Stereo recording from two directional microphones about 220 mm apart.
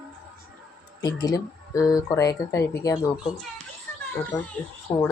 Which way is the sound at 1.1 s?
15° left (ahead or behind).